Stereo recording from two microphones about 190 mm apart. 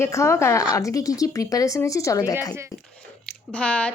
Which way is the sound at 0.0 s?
15° left (ahead or behind).